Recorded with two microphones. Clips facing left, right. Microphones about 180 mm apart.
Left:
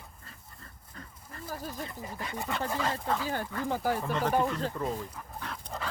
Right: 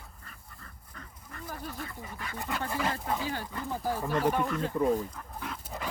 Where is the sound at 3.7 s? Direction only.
75° left (ahead or behind).